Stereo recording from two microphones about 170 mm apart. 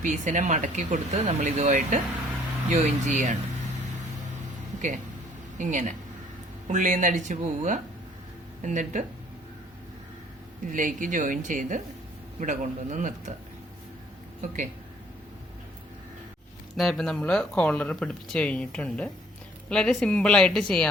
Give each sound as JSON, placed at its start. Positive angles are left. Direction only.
{"t": 0.0, "sound": "speech", "side_deg": -50}
{"t": 5.5, "sound": "speech", "side_deg": -50}
{"t": 10.7, "sound": "speech", "side_deg": -50}
{"t": 14.4, "sound": "speech", "side_deg": -45}
{"t": 16.7, "sound": "speech", "side_deg": 0}